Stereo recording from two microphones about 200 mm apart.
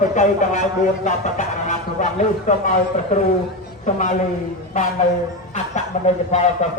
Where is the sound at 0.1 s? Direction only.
40° left (ahead or behind).